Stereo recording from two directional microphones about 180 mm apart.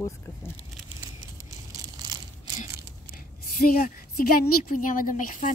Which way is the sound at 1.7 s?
20° right (ahead or behind).